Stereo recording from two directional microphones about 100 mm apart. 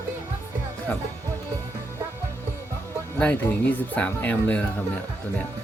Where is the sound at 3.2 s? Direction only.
15° left (ahead or behind).